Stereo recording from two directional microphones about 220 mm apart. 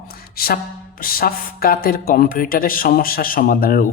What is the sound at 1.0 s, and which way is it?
Speech, 40° left (ahead or behind).